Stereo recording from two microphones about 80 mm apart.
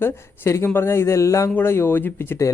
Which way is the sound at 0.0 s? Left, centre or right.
Left.